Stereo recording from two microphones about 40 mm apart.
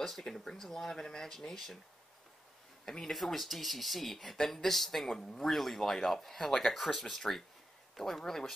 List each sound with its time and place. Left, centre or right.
0.0 s speech: centre
2.8 s speech: centre
3.1 s speech: centre